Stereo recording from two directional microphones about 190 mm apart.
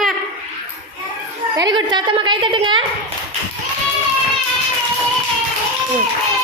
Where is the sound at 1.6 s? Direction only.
25° right (ahead or behind).